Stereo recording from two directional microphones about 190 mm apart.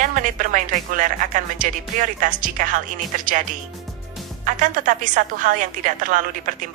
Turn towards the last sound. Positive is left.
turn(degrees=-45)  # may be behind; listen again after turning